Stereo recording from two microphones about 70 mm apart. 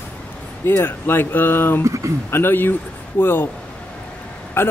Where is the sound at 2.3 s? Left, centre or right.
Left.